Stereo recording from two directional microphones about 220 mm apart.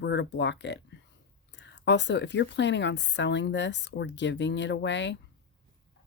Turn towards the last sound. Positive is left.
turn(degrees=55)  # may be behind; listen again after turning